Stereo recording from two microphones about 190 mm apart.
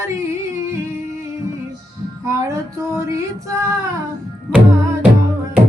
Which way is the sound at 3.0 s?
15° right (ahead or behind).